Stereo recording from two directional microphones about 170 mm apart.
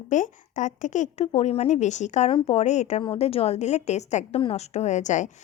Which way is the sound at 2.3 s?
35° left (ahead or behind).